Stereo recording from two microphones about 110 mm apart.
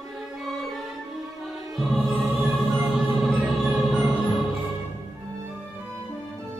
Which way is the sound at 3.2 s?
Centre (ahead or behind).